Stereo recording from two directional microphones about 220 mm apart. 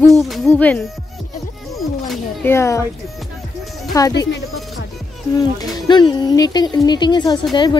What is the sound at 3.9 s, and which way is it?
Speech, 15° left (ahead or behind).